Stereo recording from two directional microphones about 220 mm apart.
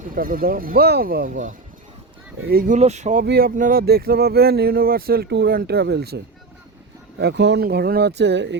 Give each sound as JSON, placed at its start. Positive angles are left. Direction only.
{"t": 0.1, "sound": "speech", "side_deg": -40}
{"t": 7.2, "sound": "speech", "side_deg": -50}